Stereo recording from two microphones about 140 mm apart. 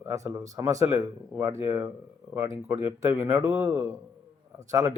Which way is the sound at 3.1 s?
20° right (ahead or behind).